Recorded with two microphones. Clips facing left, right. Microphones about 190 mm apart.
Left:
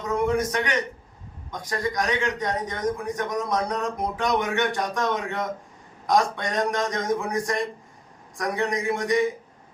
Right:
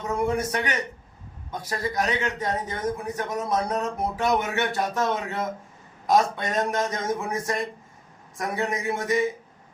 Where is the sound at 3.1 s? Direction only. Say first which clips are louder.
Left 2 dB; 10° right (ahead or behind).